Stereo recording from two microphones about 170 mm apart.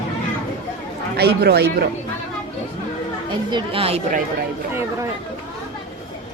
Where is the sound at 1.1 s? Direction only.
70° right (ahead or behind).